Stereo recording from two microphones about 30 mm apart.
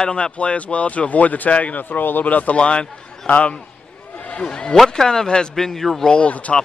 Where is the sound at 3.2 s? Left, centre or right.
Left.